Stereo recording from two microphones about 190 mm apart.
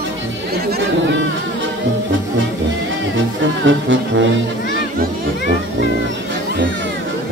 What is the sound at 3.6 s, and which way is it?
Music, 80° right.